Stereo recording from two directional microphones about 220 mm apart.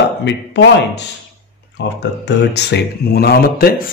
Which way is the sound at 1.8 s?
50° left (ahead or behind).